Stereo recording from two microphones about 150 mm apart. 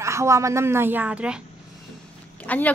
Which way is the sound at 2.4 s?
10° left (ahead or behind).